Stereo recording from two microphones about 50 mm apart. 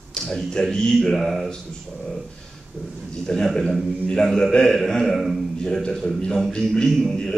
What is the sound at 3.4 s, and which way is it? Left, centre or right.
A man's voice, centre.